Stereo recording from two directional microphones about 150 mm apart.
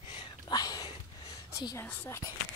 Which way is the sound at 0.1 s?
35° left (ahead or behind).